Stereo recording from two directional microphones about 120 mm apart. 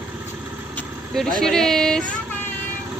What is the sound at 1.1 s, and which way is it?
Speech, 5° left (ahead or behind).